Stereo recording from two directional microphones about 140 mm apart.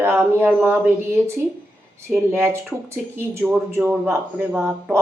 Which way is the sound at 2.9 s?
15° right (ahead or behind).